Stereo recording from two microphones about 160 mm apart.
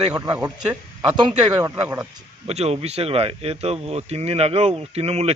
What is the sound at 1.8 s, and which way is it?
Speech, 10° right (ahead or behind).